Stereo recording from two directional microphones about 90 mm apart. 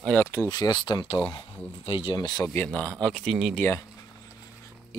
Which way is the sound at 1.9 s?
85° left.